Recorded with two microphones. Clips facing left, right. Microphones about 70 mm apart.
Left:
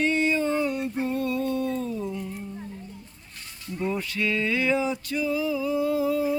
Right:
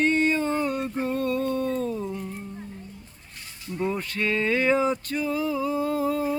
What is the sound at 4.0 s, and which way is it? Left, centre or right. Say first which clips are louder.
Male singing: right 1 dB; right.